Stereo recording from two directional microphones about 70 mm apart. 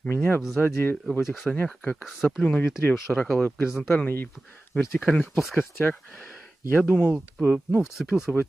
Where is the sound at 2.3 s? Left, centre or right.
Centre.